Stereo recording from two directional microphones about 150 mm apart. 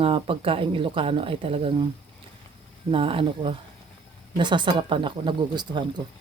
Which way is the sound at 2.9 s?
40° right (ahead or behind).